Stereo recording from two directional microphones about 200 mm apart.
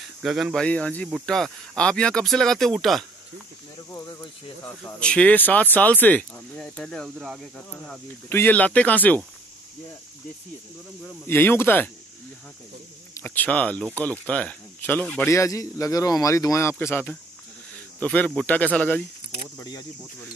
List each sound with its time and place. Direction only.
0.2 s speech: centre (ahead or behind)
3.9 s speech: 20° left (ahead or behind)
4.8 s speech: 5° left (ahead or behind)
11.2 s speech: 10° left (ahead or behind)
13.1 s speech: 10° left (ahead or behind)